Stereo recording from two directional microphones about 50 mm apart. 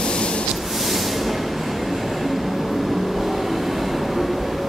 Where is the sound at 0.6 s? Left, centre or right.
Centre.